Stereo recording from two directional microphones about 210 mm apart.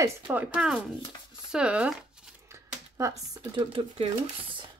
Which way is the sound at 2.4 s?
15° right (ahead or behind).